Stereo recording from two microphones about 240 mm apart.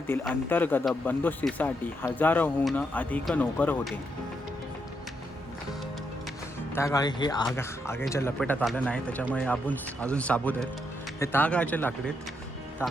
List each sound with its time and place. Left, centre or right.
0.3 s speech: centre
6.7 s speech: centre